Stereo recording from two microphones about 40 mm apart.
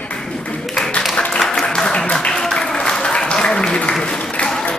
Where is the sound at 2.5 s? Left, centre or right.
Left.